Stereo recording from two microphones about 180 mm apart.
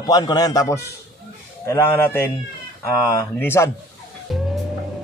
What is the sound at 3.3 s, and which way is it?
Speech, 10° left (ahead or behind).